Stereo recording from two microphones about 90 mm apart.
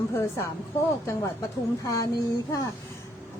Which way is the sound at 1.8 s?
40° left (ahead or behind).